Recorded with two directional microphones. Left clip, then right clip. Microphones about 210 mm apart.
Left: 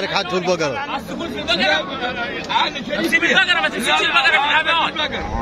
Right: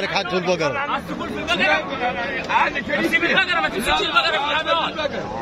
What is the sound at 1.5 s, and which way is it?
Speech, 35° left (ahead or behind).